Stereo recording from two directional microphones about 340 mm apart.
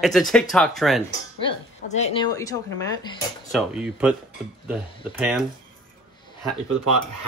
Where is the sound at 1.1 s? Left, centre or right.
Centre.